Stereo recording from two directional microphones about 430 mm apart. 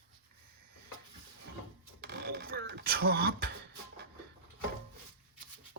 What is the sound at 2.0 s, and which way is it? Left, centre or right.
Beatboxing, right.